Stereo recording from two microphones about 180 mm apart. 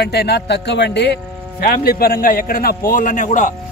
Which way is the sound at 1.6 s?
60° left (ahead or behind).